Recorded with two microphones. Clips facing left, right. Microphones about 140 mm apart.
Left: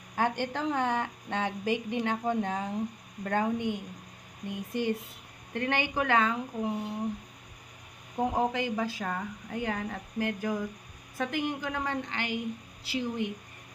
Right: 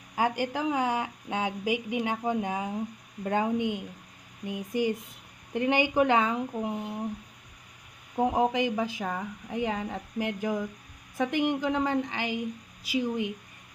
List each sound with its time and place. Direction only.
0.2 s a woman's voice: 5° right (ahead or behind)
8.1 s a woman's voice: 15° right (ahead or behind)